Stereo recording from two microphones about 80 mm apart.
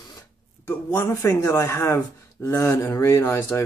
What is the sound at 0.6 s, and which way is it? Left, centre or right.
Speech, left.